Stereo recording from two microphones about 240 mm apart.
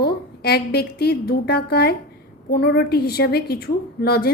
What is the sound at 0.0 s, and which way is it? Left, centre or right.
A woman's voice, left.